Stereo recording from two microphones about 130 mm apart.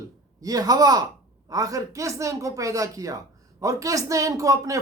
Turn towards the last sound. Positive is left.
turn(degrees=-25)  # may be behind; listen again after turning